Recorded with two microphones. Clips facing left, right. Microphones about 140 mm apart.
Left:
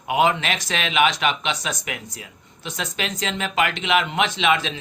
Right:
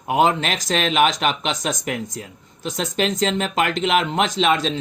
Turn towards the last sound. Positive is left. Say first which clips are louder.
# right 2 dB
turn(degrees=-40)  # may be behind; listen again after turning